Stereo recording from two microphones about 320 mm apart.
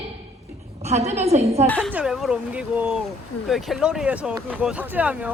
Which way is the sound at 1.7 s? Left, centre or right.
Centre.